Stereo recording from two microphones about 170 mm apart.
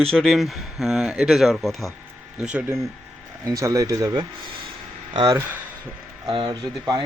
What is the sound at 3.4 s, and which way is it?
Speech, 20° right (ahead or behind).